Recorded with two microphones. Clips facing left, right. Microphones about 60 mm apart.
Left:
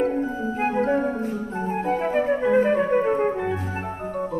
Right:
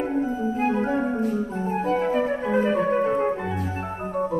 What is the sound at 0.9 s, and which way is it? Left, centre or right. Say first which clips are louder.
Music: left 1 dB; centre.